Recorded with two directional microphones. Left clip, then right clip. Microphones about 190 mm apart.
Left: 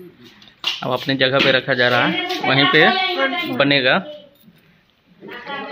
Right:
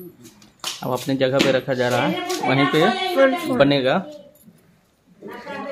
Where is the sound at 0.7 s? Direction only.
Centre (ahead or behind).